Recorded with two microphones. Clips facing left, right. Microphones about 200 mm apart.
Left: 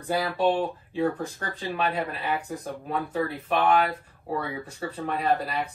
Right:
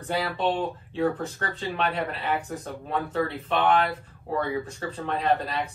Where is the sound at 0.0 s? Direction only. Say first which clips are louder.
Left 2 dB; 10° left (ahead or behind).